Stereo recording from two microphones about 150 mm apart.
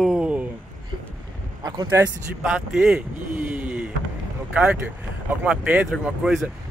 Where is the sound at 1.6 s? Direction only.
25° right (ahead or behind).